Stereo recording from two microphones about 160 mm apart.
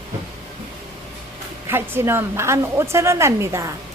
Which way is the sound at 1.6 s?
15° right (ahead or behind).